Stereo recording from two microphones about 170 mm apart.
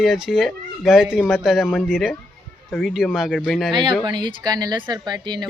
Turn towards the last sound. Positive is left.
turn(degrees=-25)  # may be behind; listen again after turning